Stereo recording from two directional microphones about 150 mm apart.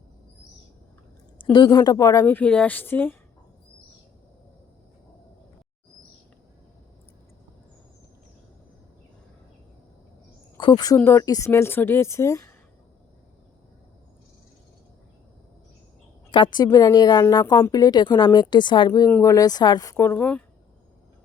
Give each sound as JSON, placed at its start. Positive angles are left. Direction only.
{"t": 1.5, "sound": "a woman's voice", "side_deg": 30}
{"t": 10.6, "sound": "a woman's voice", "side_deg": 30}
{"t": 16.3, "sound": "a woman's voice", "side_deg": 30}